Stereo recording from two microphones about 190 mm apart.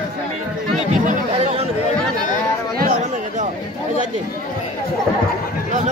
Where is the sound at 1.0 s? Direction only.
30° right (ahead or behind).